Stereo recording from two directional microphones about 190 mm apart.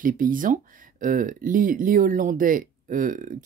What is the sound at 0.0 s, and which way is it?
Speech, 45° right (ahead or behind).